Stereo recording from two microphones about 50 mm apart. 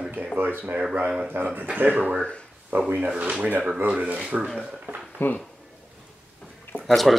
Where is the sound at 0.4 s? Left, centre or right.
Right.